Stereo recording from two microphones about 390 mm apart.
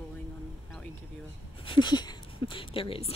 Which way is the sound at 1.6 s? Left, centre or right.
Centre.